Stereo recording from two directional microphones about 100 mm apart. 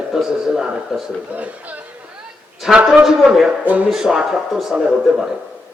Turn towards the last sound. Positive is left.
turn(degrees=-5)  # may be behind; listen again after turning